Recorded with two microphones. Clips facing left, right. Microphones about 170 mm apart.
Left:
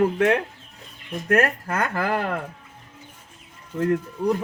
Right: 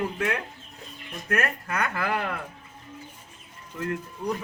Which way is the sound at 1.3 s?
35° left (ahead or behind).